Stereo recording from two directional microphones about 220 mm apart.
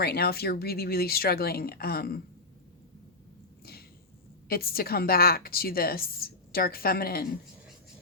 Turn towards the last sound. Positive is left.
turn(degrees=45)  # may be behind; listen again after turning